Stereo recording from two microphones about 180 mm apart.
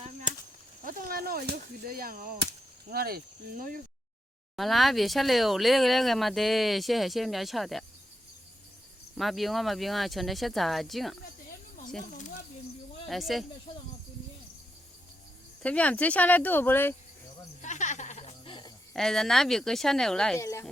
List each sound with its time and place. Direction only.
0.0 s a sound: 45° right (ahead or behind)
0.9 s speech: 50° right (ahead or behind)
4.5 s speech: centre (ahead or behind)
9.1 s speech: centre (ahead or behind)
13.1 s speech: centre (ahead or behind)
15.6 s speech: 5° left (ahead or behind)
17.6 s music: 40° left (ahead or behind)
18.9 s speech: centre (ahead or behind)
20.4 s speech: 15° left (ahead or behind)